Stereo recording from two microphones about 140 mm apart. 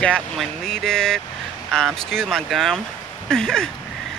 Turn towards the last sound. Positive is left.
turn(degrees=5)  # may be behind; listen again after turning